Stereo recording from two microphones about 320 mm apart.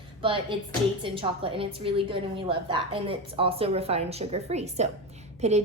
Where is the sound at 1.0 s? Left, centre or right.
Centre.